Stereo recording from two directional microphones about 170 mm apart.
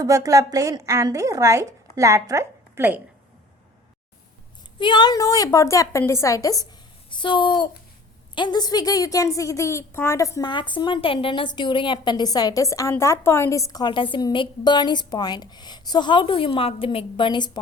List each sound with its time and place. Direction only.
0.0 s a woman's voice: 20° right (ahead or behind)
4.8 s a woman's voice: 25° left (ahead or behind)